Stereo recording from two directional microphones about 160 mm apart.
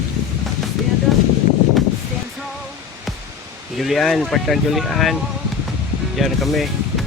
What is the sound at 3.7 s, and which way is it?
Speech, centre (ahead or behind).